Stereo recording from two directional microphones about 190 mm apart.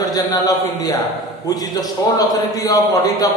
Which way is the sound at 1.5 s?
20° left (ahead or behind).